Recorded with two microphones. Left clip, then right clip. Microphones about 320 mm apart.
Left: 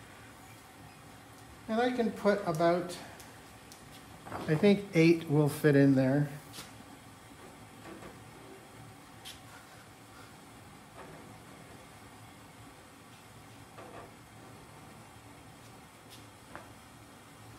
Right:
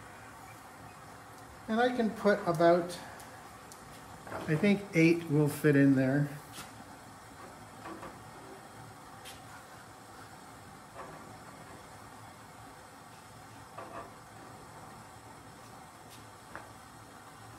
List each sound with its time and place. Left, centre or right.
1.7 s speech: centre
4.5 s speech: left